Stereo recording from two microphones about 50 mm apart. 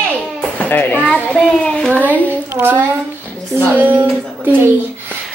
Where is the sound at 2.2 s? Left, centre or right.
Right.